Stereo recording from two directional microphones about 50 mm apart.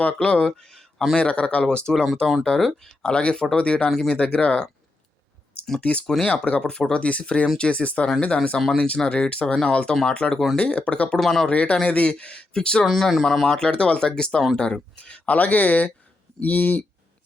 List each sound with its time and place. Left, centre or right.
0.2 s speech: centre
1.1 s speech: left
1.6 s speech: centre
3.8 s speech: centre
4.1 s speech: left
5.8 s speech: left
6.6 s speech: centre
9.9 s speech: centre; by 11.2 s left
11.2 s speech: centre
11.4 s speech: left
12.8 s speech: centre
13.6 s speech: centre
14.9 s speech: left